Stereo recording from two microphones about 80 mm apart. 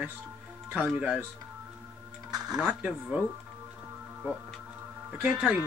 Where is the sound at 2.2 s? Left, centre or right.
Right.